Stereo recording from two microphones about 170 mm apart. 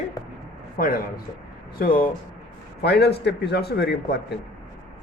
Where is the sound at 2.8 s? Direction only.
80° left.